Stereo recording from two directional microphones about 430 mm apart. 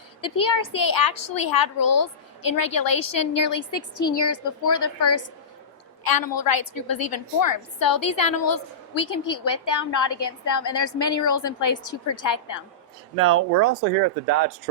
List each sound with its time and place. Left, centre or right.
0.2 s a woman's voice: left
6.1 s a woman's voice: left
13.1 s speech: right